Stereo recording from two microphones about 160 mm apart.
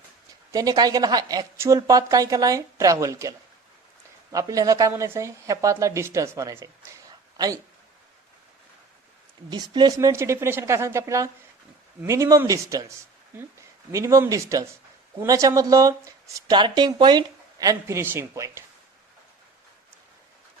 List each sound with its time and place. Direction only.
0.5 s speech: 25° right (ahead or behind)
9.5 s speech: 25° right (ahead or behind)